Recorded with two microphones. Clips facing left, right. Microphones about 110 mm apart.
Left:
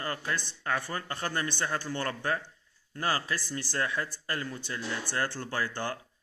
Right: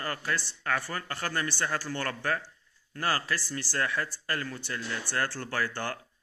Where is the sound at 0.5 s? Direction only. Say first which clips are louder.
Right 1 dB; 20° left (ahead or behind).